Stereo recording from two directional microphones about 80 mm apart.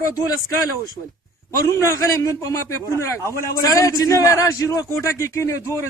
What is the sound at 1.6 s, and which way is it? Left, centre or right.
A man's voice, left.